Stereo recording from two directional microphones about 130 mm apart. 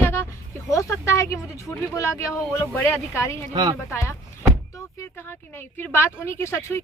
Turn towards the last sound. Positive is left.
turn(degrees=20)  # may be behind; listen again after turning